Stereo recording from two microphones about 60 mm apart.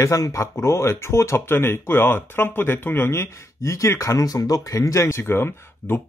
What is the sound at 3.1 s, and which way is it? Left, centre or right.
Speech, left.